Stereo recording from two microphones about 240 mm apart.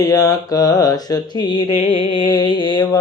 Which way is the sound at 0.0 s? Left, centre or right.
Centre.